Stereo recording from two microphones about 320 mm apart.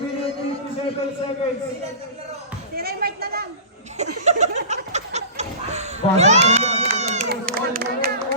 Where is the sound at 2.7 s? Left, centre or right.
Right.